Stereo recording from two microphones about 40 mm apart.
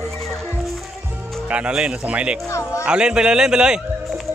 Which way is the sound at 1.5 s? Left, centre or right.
Right.